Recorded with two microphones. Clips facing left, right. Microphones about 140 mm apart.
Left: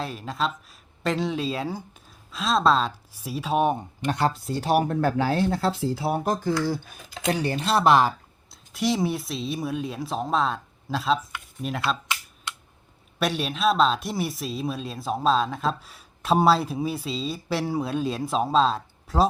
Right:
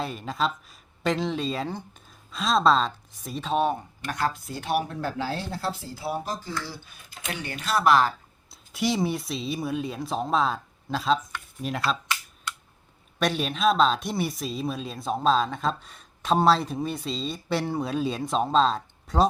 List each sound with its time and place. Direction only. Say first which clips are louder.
0.0 s speech: even; centre (ahead or behind); by 7.0 s 50° left (ahead or behind)
7.3 s speech: left 7 dB; 35° left (ahead or behind)
8.4 s speech: left 1 dB; centre (ahead or behind)
13.1 s speech: even; centre (ahead or behind)